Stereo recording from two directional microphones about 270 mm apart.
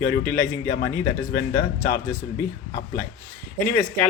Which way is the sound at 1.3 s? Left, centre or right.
Left.